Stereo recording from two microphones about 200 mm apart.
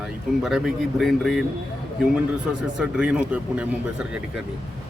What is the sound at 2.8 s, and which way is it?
Speech, 5° right (ahead or behind).